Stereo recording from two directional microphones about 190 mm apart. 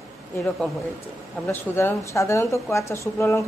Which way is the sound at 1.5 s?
10° left (ahead or behind).